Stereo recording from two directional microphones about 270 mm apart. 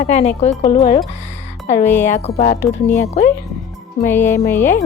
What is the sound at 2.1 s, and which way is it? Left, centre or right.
Speech, left.